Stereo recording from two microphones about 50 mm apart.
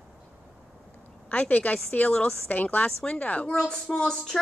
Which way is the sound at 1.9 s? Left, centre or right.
Centre.